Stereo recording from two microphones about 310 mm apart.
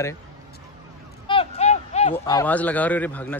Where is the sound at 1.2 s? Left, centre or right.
Centre.